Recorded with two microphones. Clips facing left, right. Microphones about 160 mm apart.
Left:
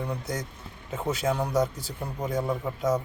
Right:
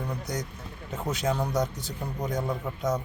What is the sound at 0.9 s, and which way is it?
Speech, 10° left (ahead or behind).